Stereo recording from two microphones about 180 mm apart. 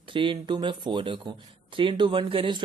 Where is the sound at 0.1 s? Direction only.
30° right (ahead or behind).